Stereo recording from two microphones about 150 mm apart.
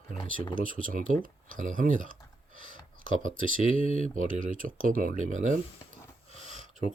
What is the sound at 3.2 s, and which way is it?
Speech, 60° right (ahead or behind).